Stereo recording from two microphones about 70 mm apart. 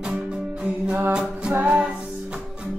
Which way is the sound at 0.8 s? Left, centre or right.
Centre.